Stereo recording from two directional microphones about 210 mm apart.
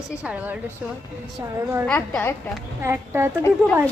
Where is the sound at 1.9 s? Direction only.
10° left (ahead or behind).